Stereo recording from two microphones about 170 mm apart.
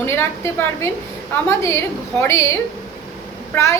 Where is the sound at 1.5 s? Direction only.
15° left (ahead or behind).